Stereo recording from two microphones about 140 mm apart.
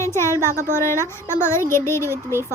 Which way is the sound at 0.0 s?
20° left (ahead or behind).